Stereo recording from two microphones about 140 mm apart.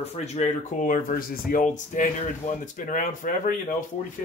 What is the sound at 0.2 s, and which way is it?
Speech, 55° left (ahead or behind).